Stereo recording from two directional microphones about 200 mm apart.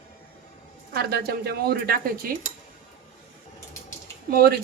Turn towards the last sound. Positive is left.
turn(degrees=-50)  # may be behind; listen again after turning